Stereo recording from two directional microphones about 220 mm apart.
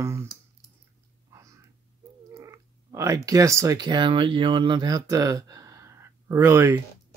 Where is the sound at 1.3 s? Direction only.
15° right (ahead or behind).